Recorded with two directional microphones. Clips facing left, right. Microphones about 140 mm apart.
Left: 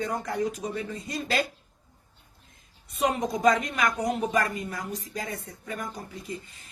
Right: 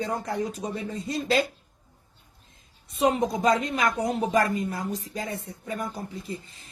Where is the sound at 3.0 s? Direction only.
30° right (ahead or behind).